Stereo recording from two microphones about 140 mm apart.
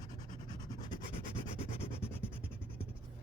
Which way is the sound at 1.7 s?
40° left (ahead or behind).